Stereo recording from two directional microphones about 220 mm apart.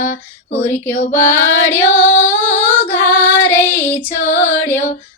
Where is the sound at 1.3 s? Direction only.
10° left (ahead or behind).